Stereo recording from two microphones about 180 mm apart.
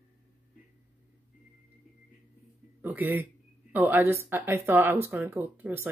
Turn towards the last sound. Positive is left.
turn(degrees=-10)  # may be behind; listen again after turning